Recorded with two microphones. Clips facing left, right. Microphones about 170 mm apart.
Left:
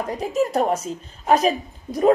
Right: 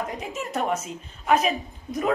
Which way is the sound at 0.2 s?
35° left (ahead or behind).